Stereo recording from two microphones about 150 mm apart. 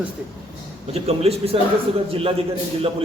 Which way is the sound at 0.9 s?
45° right (ahead or behind).